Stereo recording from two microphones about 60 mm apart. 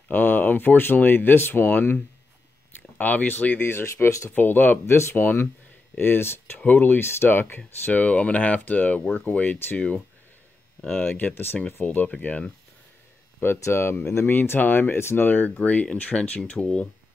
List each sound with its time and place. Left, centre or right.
0.1 s speech: left
3.0 s speech: left
4.3 s speech: left
6.6 s speech: left
13.6 s speech: left
15.2 s speech: left